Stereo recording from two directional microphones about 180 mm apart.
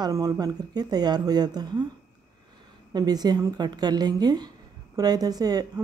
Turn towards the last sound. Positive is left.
turn(degrees=-20)  # may be behind; listen again after turning